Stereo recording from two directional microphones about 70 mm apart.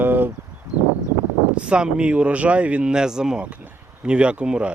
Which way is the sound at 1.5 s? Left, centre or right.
Centre.